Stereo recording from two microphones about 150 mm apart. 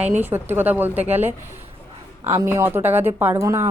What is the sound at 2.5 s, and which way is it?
A woman's voice, 15° right (ahead or behind).